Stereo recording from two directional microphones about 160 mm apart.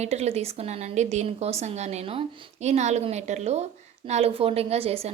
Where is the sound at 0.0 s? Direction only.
40° right (ahead or behind).